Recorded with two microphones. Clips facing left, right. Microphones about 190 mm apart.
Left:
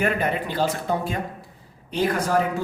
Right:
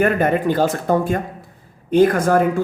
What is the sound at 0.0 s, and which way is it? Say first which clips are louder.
Speech: right 7 dB; 50° right (ahead or behind).